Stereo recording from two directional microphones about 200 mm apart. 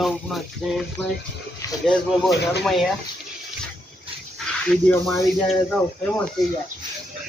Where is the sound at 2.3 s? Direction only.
55° left (ahead or behind).